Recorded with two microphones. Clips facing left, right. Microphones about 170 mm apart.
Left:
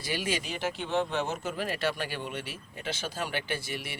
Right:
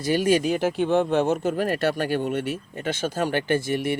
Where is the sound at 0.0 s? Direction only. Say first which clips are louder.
Right 12 dB; 45° right (ahead or behind).